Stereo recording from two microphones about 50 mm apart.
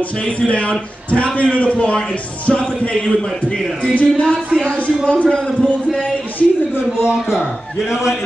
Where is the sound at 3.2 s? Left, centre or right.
Centre.